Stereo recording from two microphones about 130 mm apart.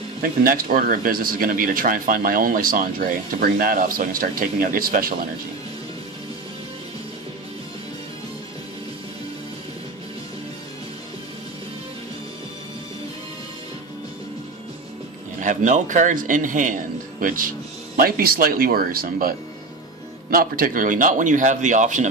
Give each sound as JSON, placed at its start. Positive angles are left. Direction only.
{"t": 0.2, "sound": "speech", "side_deg": -90}
{"t": 15.4, "sound": "speech", "side_deg": -70}
{"t": 20.3, "sound": "speech", "side_deg": -90}